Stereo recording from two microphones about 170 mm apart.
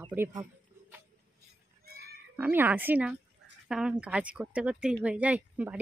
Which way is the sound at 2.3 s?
10° right (ahead or behind).